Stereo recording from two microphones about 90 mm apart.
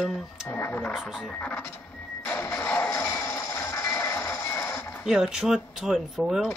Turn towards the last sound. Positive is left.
turn(degrees=0)  # may be behind; listen again after turning